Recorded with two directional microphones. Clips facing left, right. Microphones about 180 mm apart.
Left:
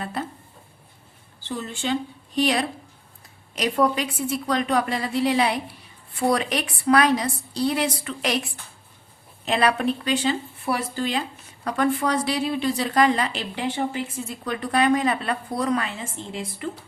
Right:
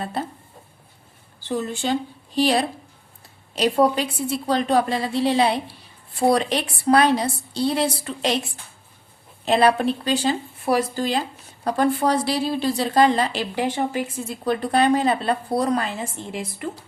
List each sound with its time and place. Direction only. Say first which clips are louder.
0.0 s speech: right 2 dB; 30° right (ahead or behind)
1.5 s a woman's voice: right 3 dB; 45° right (ahead or behind); by 8.4 s 30° right (ahead or behind)
9.5 s speech: right 4 dB; 30° right (ahead or behind)
14.4 s speech: right 3 dB; 35° right (ahead or behind)